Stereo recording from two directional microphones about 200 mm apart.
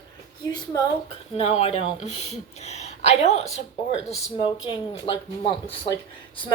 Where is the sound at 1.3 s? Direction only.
30° left (ahead or behind).